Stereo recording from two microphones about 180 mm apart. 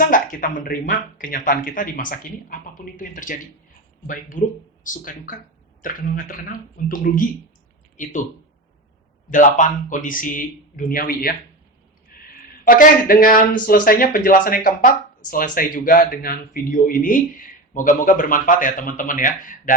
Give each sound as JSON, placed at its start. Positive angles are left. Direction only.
{"t": 0.0, "sound": "speech", "side_deg": 50}
{"t": 9.3, "sound": "speech", "side_deg": 45}
{"t": 12.1, "sound": "a sound", "side_deg": 55}
{"t": 12.6, "sound": "speech", "side_deg": 50}